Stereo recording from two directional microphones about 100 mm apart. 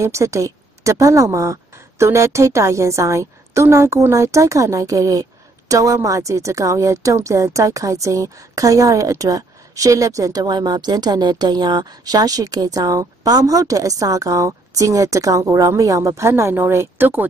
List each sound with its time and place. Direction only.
0.0 s a woman's voice: 30° right (ahead or behind)